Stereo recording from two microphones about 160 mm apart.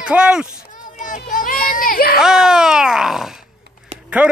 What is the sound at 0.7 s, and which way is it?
Children playing, 55° left (ahead or behind).